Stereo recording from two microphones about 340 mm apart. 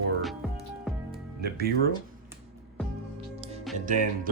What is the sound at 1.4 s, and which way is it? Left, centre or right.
Speech, right.